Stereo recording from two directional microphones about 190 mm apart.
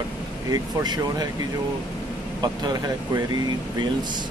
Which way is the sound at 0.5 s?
20° right (ahead or behind).